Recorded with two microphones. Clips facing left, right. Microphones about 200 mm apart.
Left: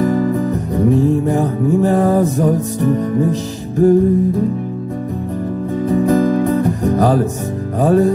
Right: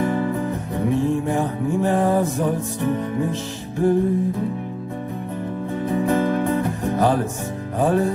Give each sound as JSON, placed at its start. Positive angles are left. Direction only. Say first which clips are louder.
{"t": 0.0, "sound": "music", "louder": "left 6 dB", "side_deg": 40}
{"t": 5.9, "sound": "music", "louder": "left 6 dB", "side_deg": 40}